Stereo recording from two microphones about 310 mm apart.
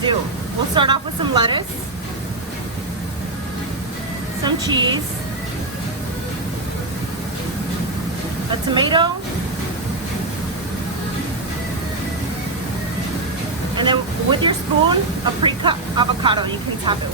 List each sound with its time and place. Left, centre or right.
0.8 s speech: centre
4.4 s speech: centre
8.7 s speech: centre
13.7 s speech: centre